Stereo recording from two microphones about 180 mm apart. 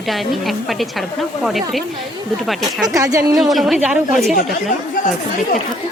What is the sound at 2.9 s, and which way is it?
Speech, 15° right (ahead or behind).